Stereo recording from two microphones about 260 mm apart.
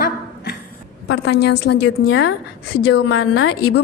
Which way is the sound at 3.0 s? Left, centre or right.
Left.